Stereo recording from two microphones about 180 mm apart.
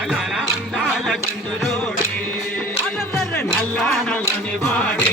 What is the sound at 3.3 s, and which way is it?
Music, 5° left (ahead or behind).